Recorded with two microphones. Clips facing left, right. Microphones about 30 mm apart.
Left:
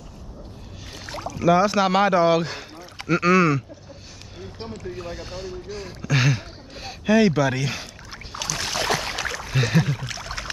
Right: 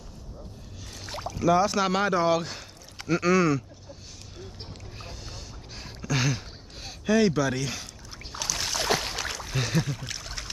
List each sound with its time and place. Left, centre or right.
1.3 s speech: centre
5.0 s a sound: centre
8.4 s boat: centre
8.7 s boat: left
9.5 s speech: left
10.0 s a sound: centre